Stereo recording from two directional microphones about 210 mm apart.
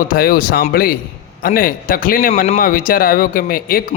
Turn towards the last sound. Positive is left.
turn(degrees=40)  # may be behind; listen again after turning